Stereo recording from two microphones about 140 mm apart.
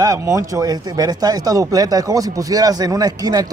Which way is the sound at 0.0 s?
25° right (ahead or behind).